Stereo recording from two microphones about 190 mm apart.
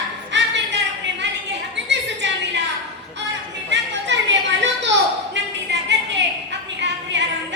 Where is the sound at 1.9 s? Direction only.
70° right (ahead or behind).